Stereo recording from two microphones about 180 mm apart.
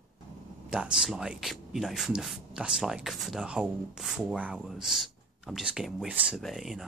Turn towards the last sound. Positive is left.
turn(degrees=0)  # may be behind; listen again after turning